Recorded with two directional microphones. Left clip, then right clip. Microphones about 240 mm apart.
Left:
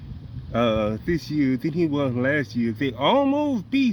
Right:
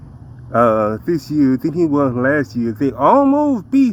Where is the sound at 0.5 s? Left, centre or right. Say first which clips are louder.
Right 9 dB; left.